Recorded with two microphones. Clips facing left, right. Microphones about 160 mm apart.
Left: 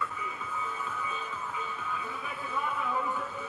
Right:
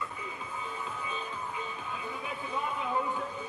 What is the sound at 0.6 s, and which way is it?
Music, 30° right (ahead or behind).